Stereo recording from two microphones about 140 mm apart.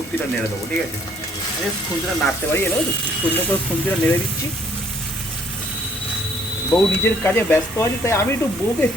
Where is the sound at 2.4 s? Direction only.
10° left (ahead or behind).